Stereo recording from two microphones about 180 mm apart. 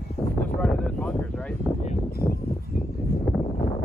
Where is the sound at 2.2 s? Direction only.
55° left (ahead or behind).